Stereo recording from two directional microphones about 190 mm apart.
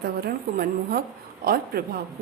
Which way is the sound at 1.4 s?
50° right (ahead or behind).